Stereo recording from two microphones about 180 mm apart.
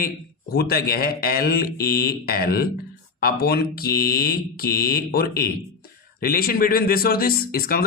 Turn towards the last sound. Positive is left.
turn(degrees=55)  # may be behind; listen again after turning